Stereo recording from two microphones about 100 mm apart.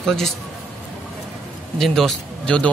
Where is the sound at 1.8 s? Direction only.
Centre (ahead or behind).